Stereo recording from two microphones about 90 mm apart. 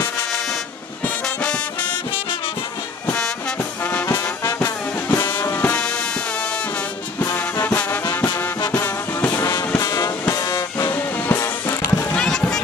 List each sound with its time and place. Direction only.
1.2 s music: 10° left (ahead or behind)
3.1 s music: 15° left (ahead or behind)
3.8 s trombone: 25° left (ahead or behind)
5.1 s music: 30° left (ahead or behind)
5.8 s music: 10° left (ahead or behind)
7.3 s music: 20° left (ahead or behind); by 10.9 s 40° left (ahead or behind)
11.1 s music: 20° left (ahead or behind)
11.4 s music: 30° left (ahead or behind)
12.1 s run: 5° left (ahead or behind)